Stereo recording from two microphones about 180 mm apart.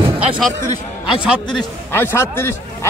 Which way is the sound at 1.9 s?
15° left (ahead or behind).